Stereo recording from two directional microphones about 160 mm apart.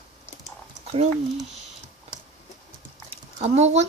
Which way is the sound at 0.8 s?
40° right (ahead or behind).